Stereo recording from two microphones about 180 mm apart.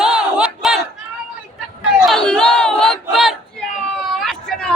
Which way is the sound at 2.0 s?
5° left (ahead or behind).